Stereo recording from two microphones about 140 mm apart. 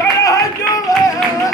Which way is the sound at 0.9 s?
25° left (ahead or behind).